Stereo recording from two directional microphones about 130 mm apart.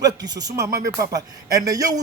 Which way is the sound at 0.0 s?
30° right (ahead or behind).